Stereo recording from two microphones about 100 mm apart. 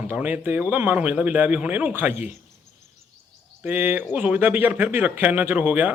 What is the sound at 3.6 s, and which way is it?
Speech, 20° right (ahead or behind).